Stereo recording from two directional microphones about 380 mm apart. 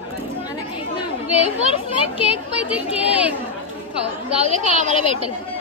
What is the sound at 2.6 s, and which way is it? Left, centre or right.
Speech, centre.